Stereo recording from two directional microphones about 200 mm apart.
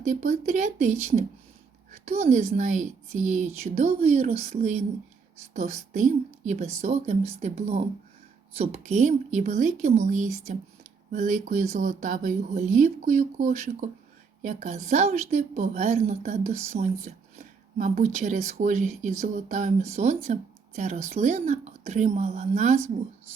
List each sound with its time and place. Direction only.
0.1 s speech: 40° right (ahead or behind)
1.9 s a sound: 30° right (ahead or behind)
2.2 s speech: 40° right (ahead or behind)